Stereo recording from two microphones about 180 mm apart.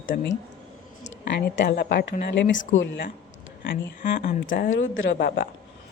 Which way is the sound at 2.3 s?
85° left.